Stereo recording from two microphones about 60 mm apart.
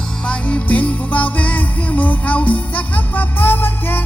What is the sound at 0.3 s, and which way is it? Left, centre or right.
Music, centre.